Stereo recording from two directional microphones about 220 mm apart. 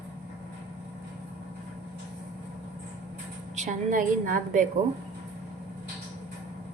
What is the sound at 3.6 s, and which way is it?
Speech, 35° right (ahead or behind).